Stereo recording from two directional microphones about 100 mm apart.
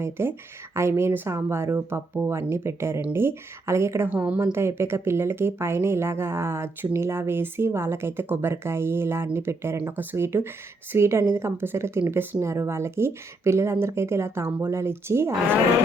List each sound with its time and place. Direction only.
0.0 s speech: 25° right (ahead or behind)